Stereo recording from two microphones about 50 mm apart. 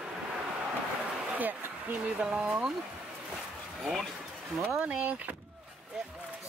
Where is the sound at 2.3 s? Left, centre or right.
Right.